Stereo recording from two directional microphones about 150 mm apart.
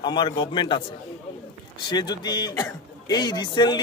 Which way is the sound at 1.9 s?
30° left (ahead or behind).